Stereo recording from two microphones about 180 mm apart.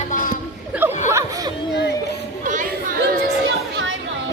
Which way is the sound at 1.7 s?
70° left (ahead or behind).